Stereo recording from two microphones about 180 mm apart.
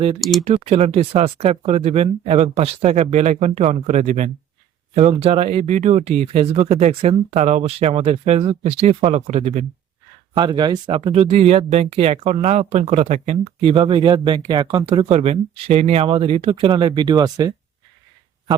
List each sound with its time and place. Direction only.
0.2 s speech: centre (ahead or behind)
0.4 s speech: 35° right (ahead or behind)
10.3 s speech: 25° right (ahead or behind)